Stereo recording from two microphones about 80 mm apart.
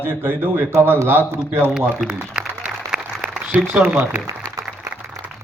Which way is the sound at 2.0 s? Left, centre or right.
Centre.